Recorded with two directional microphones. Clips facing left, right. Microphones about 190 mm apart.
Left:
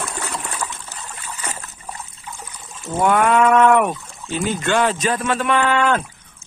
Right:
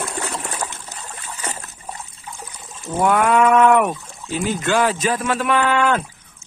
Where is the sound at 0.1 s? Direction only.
25° right (ahead or behind).